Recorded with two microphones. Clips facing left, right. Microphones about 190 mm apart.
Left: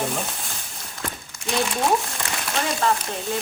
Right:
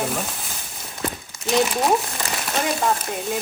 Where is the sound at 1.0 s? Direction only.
20° right (ahead or behind).